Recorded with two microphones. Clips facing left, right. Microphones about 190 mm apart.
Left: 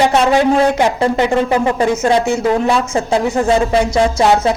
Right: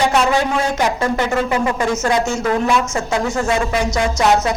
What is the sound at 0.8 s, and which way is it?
Speech, 30° left (ahead or behind).